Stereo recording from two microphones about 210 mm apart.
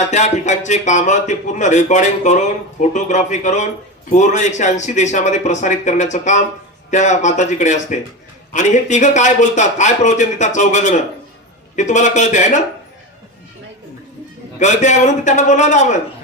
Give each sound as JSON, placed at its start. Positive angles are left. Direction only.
{"t": 0.1, "sound": "a man's voice", "side_deg": 35}
{"t": 14.6, "sound": "a man's voice", "side_deg": 35}